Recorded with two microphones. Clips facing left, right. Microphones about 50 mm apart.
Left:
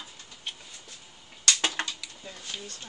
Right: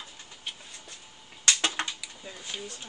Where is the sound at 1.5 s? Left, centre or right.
Centre.